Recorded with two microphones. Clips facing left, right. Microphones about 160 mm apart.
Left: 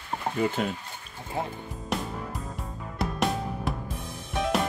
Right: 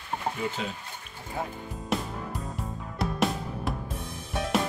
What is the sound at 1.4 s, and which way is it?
Speech, 25° left (ahead or behind).